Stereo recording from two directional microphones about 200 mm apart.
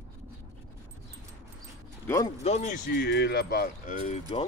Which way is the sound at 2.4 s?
35° left (ahead or behind).